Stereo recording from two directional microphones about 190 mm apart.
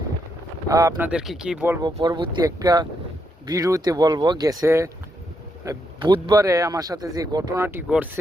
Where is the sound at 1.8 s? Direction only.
20° right (ahead or behind).